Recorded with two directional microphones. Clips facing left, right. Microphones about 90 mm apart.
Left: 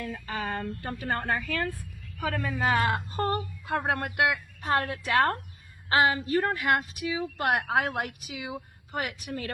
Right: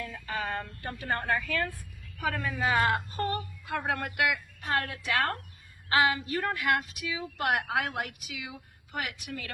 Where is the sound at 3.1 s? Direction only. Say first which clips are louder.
Left 3 dB; 35° left (ahead or behind).